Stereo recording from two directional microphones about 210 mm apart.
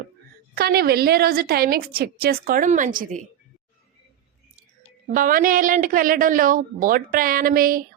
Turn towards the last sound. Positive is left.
turn(degrees=-45)  # may be behind; listen again after turning